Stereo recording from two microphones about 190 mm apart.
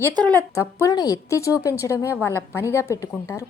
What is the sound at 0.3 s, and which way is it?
A woman's voice, 10° left (ahead or behind).